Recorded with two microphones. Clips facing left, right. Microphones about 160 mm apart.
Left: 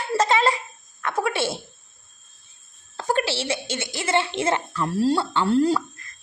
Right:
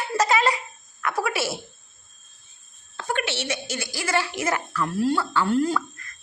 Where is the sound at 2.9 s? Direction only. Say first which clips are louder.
Left 4 dB; 35° left (ahead or behind).